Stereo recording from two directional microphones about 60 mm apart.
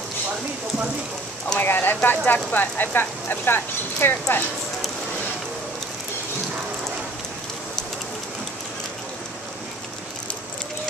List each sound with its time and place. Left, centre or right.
1.6 s speech: left